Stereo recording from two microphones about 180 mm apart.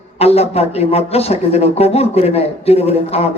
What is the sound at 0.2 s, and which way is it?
Speech, 35° left (ahead or behind).